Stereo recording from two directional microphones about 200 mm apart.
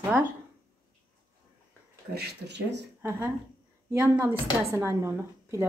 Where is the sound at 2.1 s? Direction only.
55° right (ahead or behind).